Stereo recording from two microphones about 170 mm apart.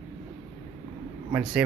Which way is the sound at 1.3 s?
5° right (ahead or behind).